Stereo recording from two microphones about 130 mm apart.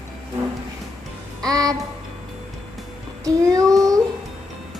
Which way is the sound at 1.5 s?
30° right (ahead or behind).